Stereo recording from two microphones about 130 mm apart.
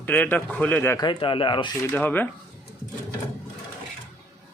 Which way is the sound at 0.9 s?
35° left (ahead or behind).